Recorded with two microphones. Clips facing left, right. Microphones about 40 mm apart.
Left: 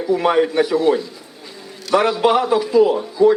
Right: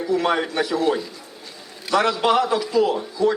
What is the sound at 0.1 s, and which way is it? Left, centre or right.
Speech, centre.